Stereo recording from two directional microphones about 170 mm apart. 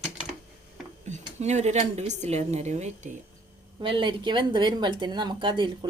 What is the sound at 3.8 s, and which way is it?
Speech, 30° right (ahead or behind).